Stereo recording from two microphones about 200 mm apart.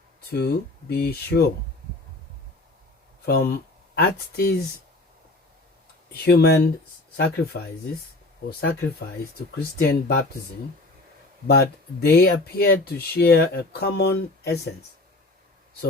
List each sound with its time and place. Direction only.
0.3 s speech: 55° left (ahead or behind)
3.2 s speech: 50° left (ahead or behind)
6.2 s speech: 55° left (ahead or behind)
9.7 s speech: 45° left (ahead or behind)
11.4 s speech: 55° left (ahead or behind)